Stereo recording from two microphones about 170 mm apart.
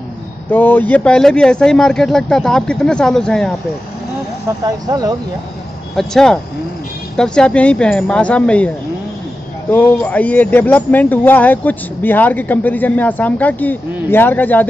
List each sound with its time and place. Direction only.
0.5 s speech: 10° left (ahead or behind)
4.5 s speech: 20° right (ahead or behind)
5.9 s speech: 5° left (ahead or behind)